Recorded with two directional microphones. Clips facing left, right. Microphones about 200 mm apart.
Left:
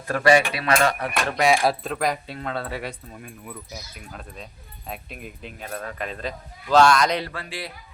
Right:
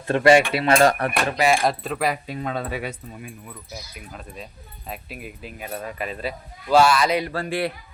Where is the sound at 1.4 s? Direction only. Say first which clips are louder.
Left 1 dB; centre (ahead or behind).